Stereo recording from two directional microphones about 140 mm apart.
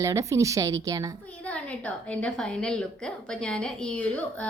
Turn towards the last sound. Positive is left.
turn(degrees=10)  # may be behind; listen again after turning